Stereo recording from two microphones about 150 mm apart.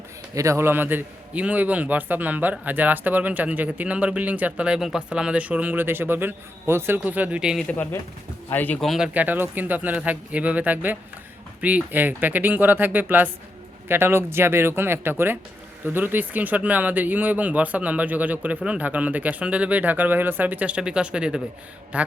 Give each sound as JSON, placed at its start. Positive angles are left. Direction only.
{"t": 0.3, "sound": "a man's voice", "side_deg": -20}
{"t": 8.4, "sound": "speech", "side_deg": 10}
{"t": 9.1, "sound": "a man's voice", "side_deg": -10}